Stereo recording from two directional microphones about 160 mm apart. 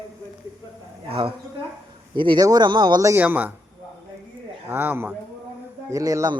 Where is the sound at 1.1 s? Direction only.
35° right (ahead or behind); by 3.5 s 10° right (ahead or behind).